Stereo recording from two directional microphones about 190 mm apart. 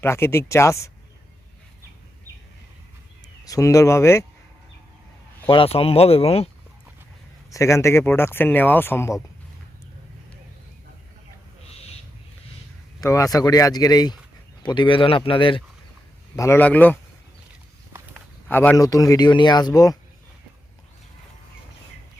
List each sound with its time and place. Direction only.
0.0 s speech: 15° left (ahead or behind)
3.4 s speech: 15° left (ahead or behind)
5.5 s speech: 30° left (ahead or behind)
7.5 s speech: 15° left (ahead or behind)
13.0 s speech: 15° left (ahead or behind)
16.3 s speech: 15° left (ahead or behind)
18.4 s speech: 10° left (ahead or behind)